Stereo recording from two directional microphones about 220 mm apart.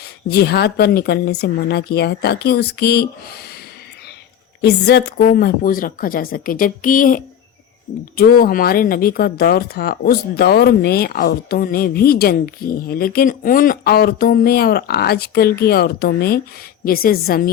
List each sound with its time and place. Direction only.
0.3 s speech: 45° left (ahead or behind)
4.6 s a woman's voice: 50° left (ahead or behind)